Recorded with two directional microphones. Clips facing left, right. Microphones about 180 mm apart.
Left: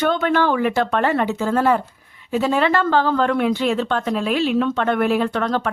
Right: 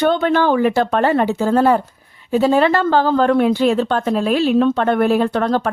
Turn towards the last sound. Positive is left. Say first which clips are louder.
# right 4 dB
turn(degrees=-35)  # may be behind; listen again after turning